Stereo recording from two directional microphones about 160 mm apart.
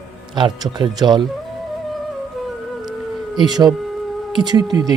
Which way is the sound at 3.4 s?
25° right (ahead or behind).